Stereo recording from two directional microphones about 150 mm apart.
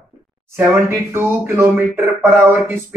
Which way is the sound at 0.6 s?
15° right (ahead or behind).